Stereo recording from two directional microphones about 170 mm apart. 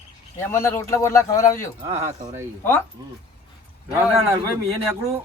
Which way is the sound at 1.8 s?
35° right (ahead or behind).